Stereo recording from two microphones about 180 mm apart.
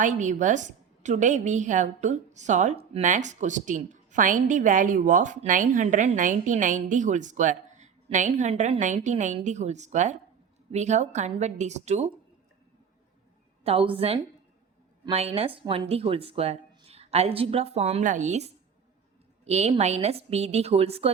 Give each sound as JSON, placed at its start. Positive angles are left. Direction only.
{"t": 0.0, "sound": "a woman's voice", "side_deg": -45}
{"t": 13.7, "sound": "speech", "side_deg": -30}